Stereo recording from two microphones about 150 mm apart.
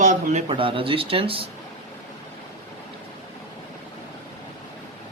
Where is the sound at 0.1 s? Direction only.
55° right (ahead or behind).